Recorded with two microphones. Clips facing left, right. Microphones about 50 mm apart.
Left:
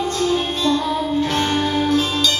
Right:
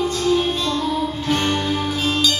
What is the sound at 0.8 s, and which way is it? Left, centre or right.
Music, left.